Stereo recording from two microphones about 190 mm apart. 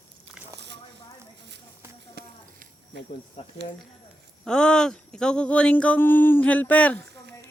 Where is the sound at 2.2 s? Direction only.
55° right (ahead or behind).